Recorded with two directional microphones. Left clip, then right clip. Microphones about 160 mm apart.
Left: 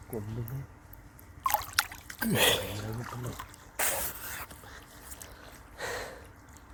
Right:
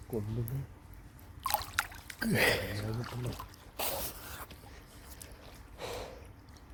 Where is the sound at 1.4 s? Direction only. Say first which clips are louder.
Left 4 dB; 10° left (ahead or behind).